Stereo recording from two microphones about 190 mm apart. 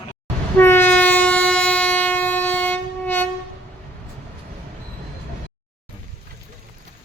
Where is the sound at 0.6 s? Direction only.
10° left (ahead or behind).